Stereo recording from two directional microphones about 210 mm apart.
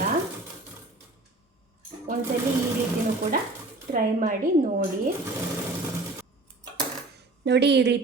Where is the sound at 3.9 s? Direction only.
40° right (ahead or behind).